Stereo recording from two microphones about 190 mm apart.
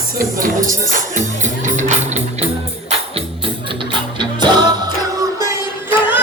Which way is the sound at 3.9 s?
25° right (ahead or behind).